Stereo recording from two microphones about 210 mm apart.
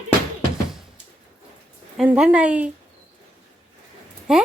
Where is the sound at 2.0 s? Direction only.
5° right (ahead or behind).